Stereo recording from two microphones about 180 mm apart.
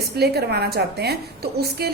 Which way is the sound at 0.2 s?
65° right (ahead or behind).